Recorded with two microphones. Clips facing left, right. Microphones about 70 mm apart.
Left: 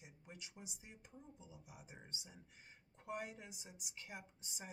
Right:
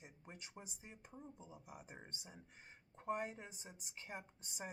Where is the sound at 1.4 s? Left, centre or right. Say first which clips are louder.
Right 3 dB; right.